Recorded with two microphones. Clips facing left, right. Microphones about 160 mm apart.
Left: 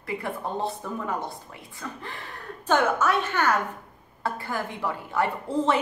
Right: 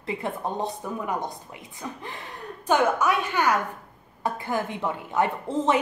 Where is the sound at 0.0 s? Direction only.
20° right (ahead or behind).